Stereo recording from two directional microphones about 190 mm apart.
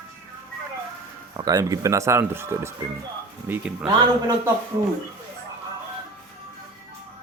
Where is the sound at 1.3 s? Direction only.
20° right (ahead or behind).